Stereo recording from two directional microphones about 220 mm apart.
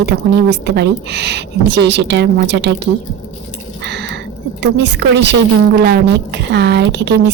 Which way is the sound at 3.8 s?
50° right (ahead or behind).